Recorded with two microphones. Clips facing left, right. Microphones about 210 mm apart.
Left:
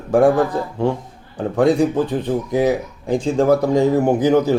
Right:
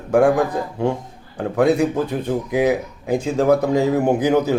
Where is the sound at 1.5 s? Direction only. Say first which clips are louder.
Left 1 dB; 10° right (ahead or behind).